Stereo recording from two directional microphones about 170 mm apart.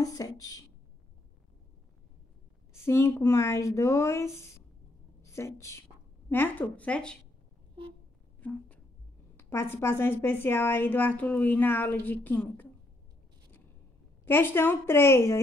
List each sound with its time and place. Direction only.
0.0 s speech: 20° left (ahead or behind)
2.7 s a woman's voice: 15° left (ahead or behind)
8.4 s a sound: 10° left (ahead or behind)
9.4 s a woman's voice: 15° left (ahead or behind)
14.2 s a woman's voice: 10° left (ahead or behind)